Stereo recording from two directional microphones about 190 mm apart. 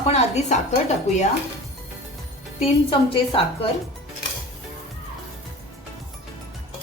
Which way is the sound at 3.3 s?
30° left (ahead or behind).